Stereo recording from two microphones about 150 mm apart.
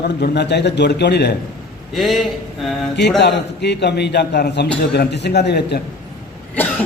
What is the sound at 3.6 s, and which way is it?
A man's voice, 90° left.